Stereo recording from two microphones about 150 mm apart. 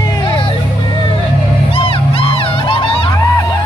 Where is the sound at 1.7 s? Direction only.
35° left (ahead or behind).